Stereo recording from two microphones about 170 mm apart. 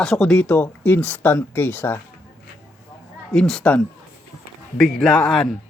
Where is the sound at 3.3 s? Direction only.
5° left (ahead or behind).